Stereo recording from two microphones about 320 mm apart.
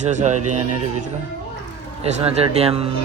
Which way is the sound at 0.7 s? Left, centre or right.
Right.